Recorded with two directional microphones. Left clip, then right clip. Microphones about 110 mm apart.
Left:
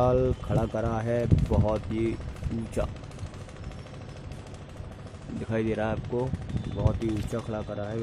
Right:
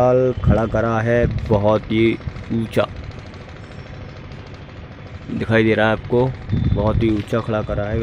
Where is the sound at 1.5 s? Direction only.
20° right (ahead or behind).